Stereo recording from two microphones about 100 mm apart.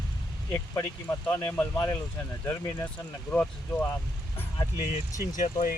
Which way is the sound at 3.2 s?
15° left (ahead or behind).